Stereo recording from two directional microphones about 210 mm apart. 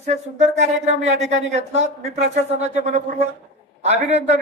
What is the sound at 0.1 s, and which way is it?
A man's voice, 35° right (ahead or behind).